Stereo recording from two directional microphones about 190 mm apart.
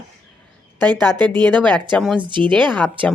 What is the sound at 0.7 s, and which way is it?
Speech, 20° right (ahead or behind).